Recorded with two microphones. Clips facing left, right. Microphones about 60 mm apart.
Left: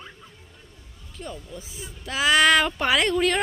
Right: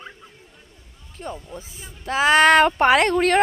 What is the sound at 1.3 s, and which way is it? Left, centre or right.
Speech, right.